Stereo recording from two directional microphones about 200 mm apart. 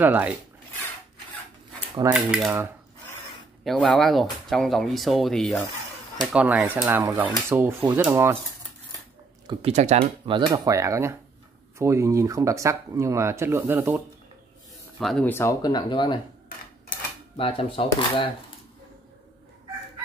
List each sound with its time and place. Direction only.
0.0 s speech: 10° right (ahead or behind)
2.1 s speech: 5° right (ahead or behind)
3.6 s speech: centre (ahead or behind)
9.5 s speech: 30° right (ahead or behind); by 14.0 s 10° right (ahead or behind)
15.0 s speech: centre (ahead or behind); by 16.2 s 25° left (ahead or behind)
17.4 s speech: 25° left (ahead or behind)